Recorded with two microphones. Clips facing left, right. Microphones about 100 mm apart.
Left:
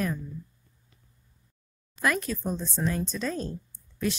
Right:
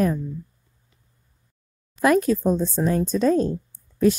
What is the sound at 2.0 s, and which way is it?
Speech, 45° right (ahead or behind).